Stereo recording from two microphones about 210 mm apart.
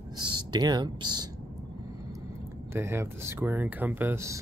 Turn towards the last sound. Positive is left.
turn(degrees=-10)  # may be behind; listen again after turning